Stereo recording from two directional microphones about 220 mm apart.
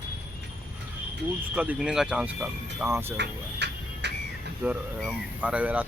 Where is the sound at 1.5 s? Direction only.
5° right (ahead or behind).